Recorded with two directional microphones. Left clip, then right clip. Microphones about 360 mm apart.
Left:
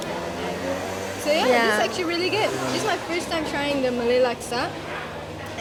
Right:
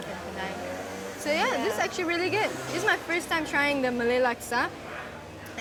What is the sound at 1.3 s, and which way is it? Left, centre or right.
Speech, centre.